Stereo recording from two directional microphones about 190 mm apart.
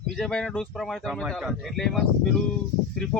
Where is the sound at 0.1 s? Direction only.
Centre (ahead or behind).